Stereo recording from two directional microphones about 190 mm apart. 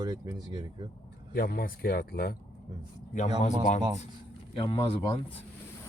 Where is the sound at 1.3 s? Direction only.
50° left (ahead or behind).